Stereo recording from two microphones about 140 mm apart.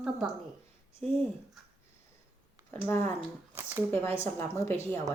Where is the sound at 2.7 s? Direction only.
15° left (ahead or behind).